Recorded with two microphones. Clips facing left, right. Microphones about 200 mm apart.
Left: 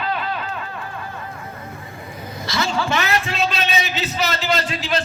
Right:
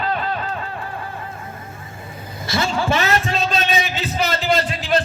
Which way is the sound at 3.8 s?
50° right (ahead or behind).